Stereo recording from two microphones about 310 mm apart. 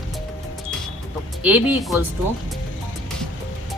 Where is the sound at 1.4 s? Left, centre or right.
Centre.